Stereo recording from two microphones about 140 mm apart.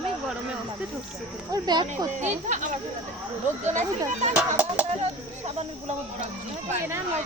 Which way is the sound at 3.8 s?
55° right (ahead or behind).